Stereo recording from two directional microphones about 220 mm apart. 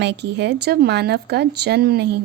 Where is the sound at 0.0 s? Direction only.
50° right (ahead or behind).